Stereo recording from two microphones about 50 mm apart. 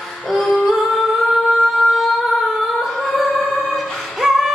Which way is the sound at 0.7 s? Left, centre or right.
Centre.